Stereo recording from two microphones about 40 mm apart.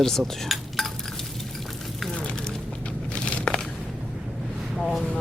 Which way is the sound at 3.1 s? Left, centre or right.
Left.